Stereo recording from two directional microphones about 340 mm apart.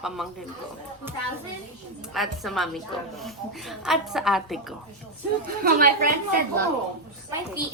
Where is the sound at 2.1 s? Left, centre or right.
Centre.